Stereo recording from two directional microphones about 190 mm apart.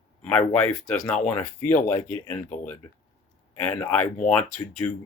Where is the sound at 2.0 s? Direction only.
10° left (ahead or behind).